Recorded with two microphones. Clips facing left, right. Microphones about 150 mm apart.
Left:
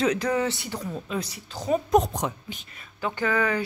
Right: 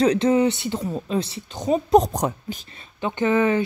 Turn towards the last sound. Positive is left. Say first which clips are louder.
# right 6 dB
turn(degrees=-20)  # may be behind; listen again after turning